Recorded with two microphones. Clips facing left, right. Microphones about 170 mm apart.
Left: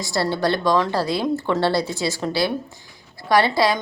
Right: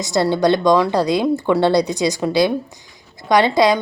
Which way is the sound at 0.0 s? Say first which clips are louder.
Right 5 dB; 20° right (ahead or behind).